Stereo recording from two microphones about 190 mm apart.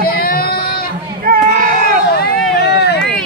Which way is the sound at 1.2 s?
50° right (ahead or behind).